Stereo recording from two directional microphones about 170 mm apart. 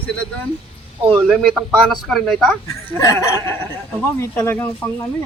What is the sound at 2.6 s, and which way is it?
Speech, 20° left (ahead or behind).